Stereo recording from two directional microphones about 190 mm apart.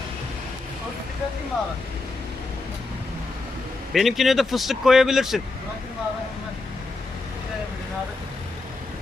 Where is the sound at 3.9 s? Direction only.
Centre (ahead or behind).